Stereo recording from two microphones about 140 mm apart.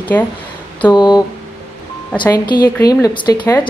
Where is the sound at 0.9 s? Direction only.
30° left (ahead or behind).